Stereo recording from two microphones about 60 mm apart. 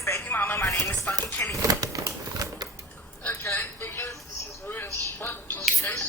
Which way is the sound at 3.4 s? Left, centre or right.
Left.